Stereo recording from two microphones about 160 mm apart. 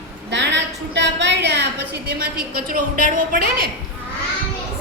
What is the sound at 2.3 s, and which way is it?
A woman's voice, 65° right (ahead or behind).